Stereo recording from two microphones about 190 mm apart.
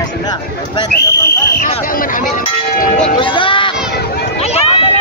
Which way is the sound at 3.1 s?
25° left (ahead or behind).